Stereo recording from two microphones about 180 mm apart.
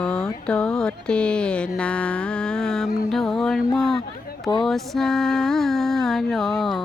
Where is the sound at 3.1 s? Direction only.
Centre (ahead or behind).